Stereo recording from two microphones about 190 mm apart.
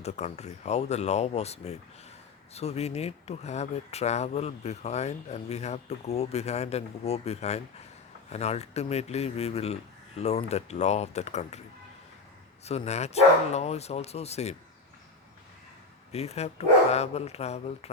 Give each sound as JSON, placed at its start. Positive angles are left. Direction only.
{"t": 0.0, "sound": "speech", "side_deg": 35}
{"t": 12.6, "sound": "speech", "side_deg": 35}
{"t": 16.1, "sound": "speech", "side_deg": 35}